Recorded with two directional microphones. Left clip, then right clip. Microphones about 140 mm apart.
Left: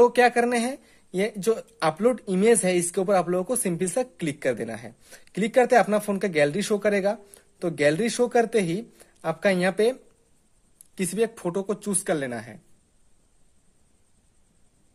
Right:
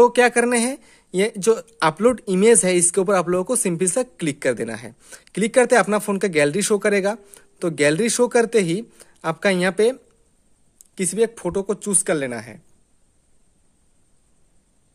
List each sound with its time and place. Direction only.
0.0 s speech: 35° right (ahead or behind)